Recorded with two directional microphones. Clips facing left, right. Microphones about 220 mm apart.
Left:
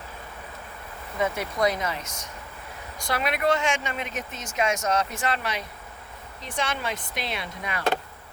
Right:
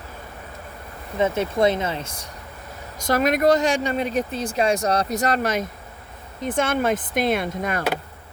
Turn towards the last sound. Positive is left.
turn(degrees=-50)  # may be behind; listen again after turning